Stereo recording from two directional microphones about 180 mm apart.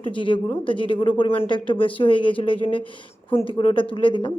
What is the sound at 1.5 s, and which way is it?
Speech, 30° left (ahead or behind).